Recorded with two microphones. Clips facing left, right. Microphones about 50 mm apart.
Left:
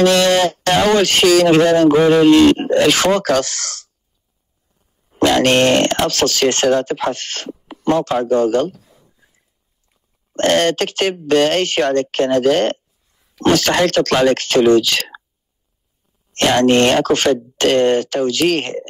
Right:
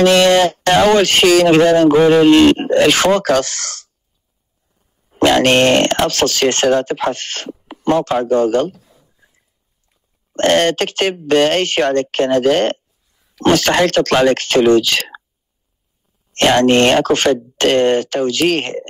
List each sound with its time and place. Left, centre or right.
0.0 s speech: right
5.2 s speech: right
10.3 s speech: right
16.3 s speech: right